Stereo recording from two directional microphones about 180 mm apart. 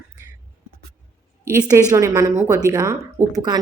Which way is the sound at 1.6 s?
20° right (ahead or behind).